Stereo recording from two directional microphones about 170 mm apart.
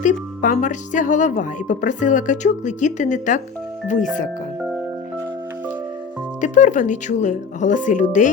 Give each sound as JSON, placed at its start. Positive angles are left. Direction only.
{"t": 0.0, "sound": "speech", "side_deg": 45}
{"t": 6.4, "sound": "speech", "side_deg": 45}